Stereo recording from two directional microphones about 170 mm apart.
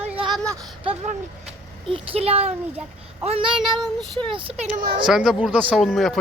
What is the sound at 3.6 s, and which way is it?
Speech, centre (ahead or behind).